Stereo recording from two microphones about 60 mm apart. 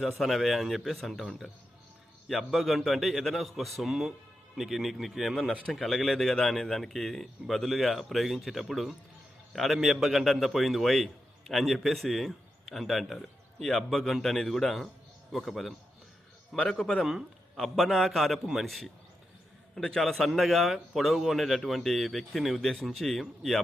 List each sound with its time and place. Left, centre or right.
0.0 s a man's voice: centre
16.6 s a man's voice: centre
17.0 s a man's voice: centre